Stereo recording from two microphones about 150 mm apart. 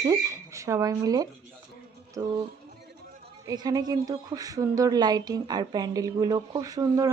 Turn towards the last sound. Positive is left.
turn(degrees=-25)  # may be behind; listen again after turning